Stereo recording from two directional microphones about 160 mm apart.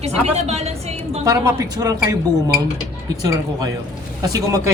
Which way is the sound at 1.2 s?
20° right (ahead or behind).